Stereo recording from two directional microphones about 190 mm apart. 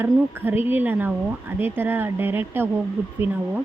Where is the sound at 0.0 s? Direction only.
10° right (ahead or behind).